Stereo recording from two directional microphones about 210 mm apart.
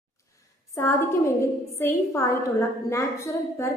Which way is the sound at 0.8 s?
10° left (ahead or behind).